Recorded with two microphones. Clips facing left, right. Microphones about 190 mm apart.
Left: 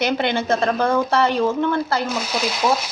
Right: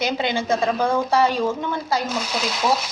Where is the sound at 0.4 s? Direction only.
15° right (ahead or behind).